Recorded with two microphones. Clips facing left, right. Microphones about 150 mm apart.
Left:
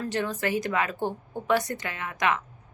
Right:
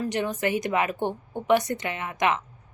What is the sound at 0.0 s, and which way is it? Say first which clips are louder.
Speech: right 2 dB; 20° right (ahead or behind).